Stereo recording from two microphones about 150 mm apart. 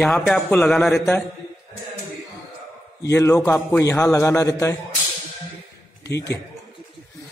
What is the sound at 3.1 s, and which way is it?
A man's voice, 20° left (ahead or behind).